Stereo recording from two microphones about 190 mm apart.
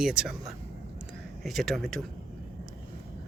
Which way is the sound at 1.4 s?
Centre (ahead or behind).